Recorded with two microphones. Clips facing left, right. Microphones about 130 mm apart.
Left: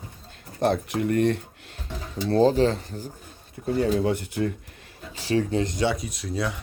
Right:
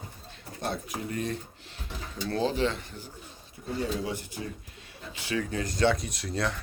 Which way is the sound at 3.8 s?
65° left (ahead or behind).